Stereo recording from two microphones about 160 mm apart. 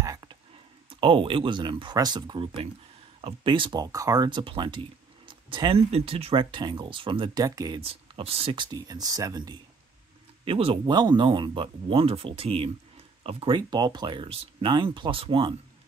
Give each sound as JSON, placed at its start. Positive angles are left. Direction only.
{"t": 0.0, "sound": "whispering", "side_deg": -20}
{"t": 0.8, "sound": "speech", "side_deg": -30}
{"t": 7.8, "sound": "speech", "side_deg": -35}
{"t": 8.7, "sound": "speech", "side_deg": -25}
{"t": 10.4, "sound": "speech", "side_deg": -35}